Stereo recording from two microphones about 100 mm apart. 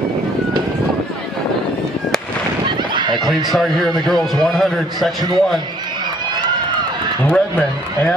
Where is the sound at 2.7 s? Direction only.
50° right (ahead or behind).